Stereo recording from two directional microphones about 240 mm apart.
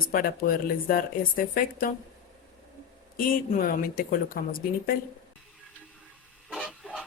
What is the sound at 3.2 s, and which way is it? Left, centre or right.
Speech, left.